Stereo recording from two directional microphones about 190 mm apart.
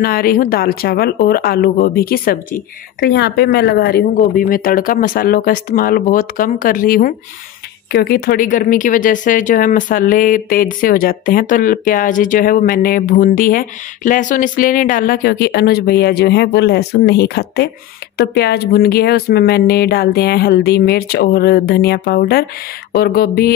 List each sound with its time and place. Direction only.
0.0 s speech: 50° left (ahead or behind)